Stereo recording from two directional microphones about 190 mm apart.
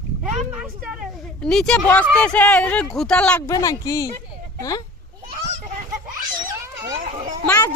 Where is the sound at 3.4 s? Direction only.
20° left (ahead or behind).